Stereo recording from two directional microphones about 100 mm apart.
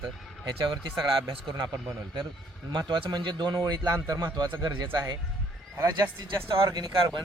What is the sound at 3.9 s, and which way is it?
A man's voice, 35° right (ahead or behind).